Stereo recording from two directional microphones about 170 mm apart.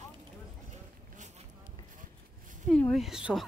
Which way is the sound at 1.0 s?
45° right (ahead or behind).